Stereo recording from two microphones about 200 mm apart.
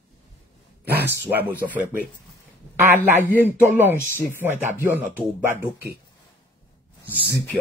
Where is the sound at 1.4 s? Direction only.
10° right (ahead or behind).